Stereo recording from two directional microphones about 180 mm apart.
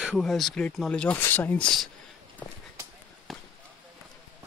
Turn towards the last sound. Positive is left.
turn(degrees=0)  # may be behind; listen again after turning